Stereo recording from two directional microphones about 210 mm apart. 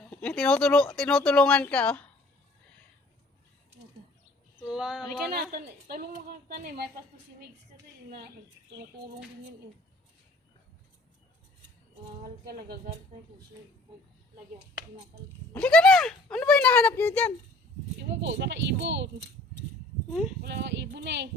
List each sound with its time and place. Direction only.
0.1 s speech: 5° left (ahead or behind)
4.7 s speech: centre (ahead or behind)
5.5 s a woman's voice: 45° right (ahead or behind)
12.2 s a woman's voice: 45° right (ahead or behind)
15.5 s speech: 5° left (ahead or behind)
18.0 s speech: 60° right (ahead or behind)
20.4 s speech: 55° right (ahead or behind)